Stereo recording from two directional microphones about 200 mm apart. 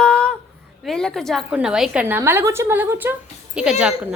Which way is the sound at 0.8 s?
Centre (ahead or behind).